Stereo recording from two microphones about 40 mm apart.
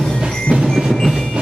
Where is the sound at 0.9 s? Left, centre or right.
Centre.